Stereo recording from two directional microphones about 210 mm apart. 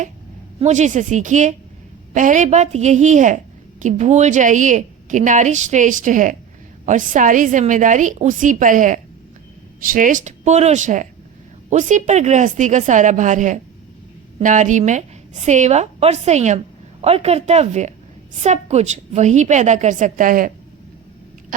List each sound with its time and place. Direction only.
0.6 s a woman's voice: 35° right (ahead or behind)